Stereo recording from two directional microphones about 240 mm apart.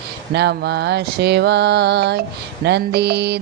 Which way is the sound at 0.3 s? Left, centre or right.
Right.